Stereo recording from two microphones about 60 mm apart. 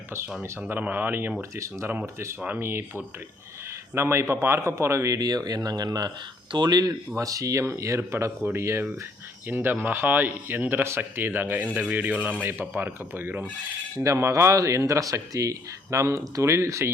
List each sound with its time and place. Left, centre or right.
0.7 s speech: right
1.4 s speech: right
7.2 s speech: right
7.8 s speech: right
13.9 s speech: right